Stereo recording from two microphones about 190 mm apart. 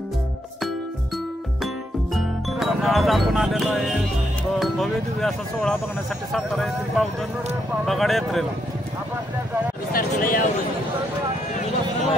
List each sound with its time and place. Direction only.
2.1 s speech: centre (ahead or behind)
9.9 s speech: 45° left (ahead or behind)